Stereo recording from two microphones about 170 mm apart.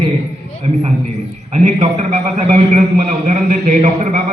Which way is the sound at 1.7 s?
45° right (ahead or behind).